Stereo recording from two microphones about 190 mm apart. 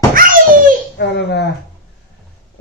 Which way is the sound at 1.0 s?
60° left (ahead or behind).